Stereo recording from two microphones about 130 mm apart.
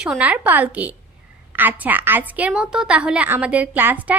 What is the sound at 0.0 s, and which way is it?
A woman's voice, 10° right (ahead or behind).